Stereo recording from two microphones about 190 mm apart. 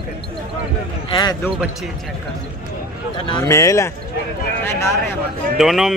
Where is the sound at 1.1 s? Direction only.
20° left (ahead or behind).